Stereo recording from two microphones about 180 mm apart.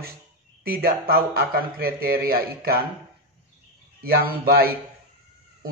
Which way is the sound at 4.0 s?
55° right (ahead or behind).